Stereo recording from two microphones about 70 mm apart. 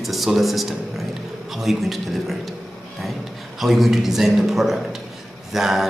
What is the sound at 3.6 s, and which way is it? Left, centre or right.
A man's voice, centre.